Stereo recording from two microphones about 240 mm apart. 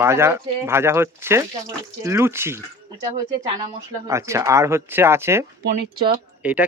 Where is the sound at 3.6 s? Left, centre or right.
Centre.